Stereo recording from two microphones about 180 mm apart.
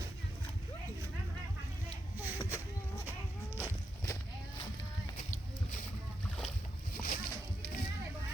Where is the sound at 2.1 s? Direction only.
10° right (ahead or behind).